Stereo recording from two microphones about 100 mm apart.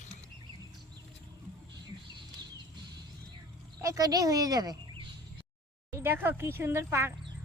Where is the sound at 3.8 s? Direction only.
35° right (ahead or behind).